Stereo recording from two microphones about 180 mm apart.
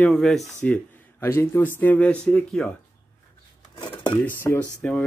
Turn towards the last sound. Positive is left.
turn(degrees=5)  # may be behind; listen again after turning